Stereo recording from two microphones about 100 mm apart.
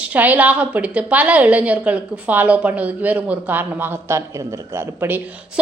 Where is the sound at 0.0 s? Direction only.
15° right (ahead or behind).